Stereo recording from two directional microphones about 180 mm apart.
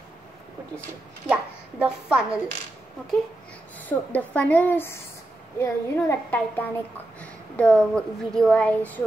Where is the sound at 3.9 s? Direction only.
10° left (ahead or behind).